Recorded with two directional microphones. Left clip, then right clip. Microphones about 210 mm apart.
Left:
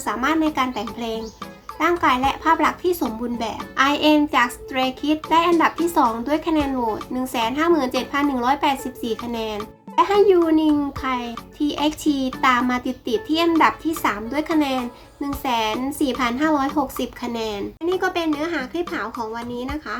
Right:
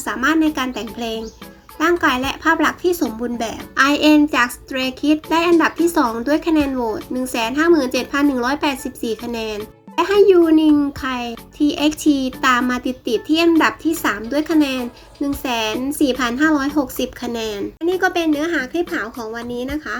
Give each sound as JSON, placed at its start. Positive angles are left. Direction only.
{"t": 0.0, "sound": "a child's voice", "side_deg": -15}